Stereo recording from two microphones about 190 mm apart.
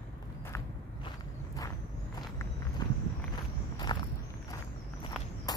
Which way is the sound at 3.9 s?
20° left (ahead or behind).